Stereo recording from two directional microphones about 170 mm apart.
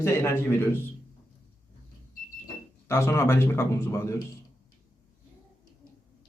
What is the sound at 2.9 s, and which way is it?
A man's voice, 15° left (ahead or behind).